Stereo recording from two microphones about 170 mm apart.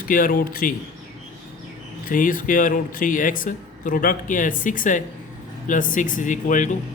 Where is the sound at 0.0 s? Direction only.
55° left (ahead or behind).